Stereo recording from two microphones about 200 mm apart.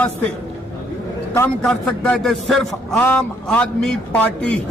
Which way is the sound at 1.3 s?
10° left (ahead or behind).